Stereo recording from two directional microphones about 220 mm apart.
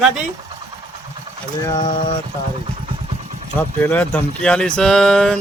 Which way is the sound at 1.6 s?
15° left (ahead or behind).